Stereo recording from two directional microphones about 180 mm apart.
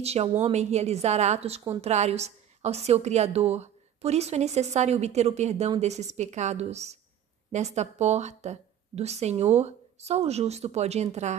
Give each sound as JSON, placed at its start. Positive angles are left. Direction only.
{"t": 0.0, "sound": "a woman's voice", "side_deg": -35}